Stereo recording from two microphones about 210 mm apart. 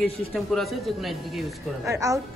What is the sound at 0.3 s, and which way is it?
Speech, centre (ahead or behind).